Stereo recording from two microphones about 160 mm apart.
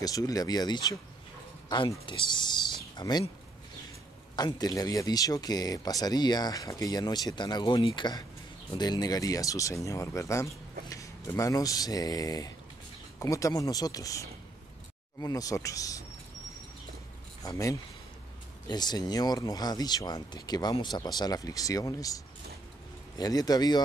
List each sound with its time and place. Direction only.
0.0 s speech: 25° left (ahead or behind)
4.4 s speech: 25° left (ahead or behind)
17.4 s speech: 20° left (ahead or behind)